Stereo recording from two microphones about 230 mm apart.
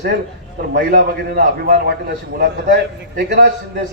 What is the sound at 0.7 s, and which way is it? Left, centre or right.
A man's voice, right.